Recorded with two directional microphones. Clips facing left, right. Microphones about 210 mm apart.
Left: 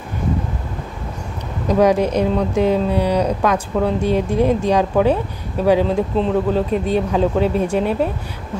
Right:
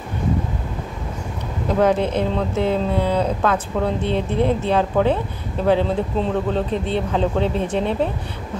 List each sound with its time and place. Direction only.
1.7 s speech: 15° left (ahead or behind)
6.1 s speech: centre (ahead or behind)